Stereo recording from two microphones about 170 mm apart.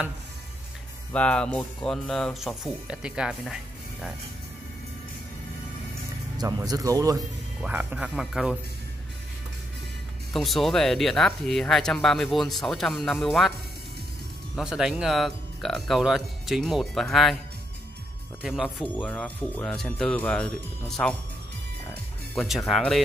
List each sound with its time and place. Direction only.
1.1 s speech: 5° left (ahead or behind)
6.3 s speech: 20° right (ahead or behind)
7.6 s speech: 10° right (ahead or behind)
10.3 s speech: centre (ahead or behind)
14.5 s speech: 5° right (ahead or behind)
18.4 s speech: centre (ahead or behind)
22.3 s speech: centre (ahead or behind)